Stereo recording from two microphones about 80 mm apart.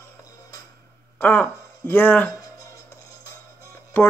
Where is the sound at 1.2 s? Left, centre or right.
Centre.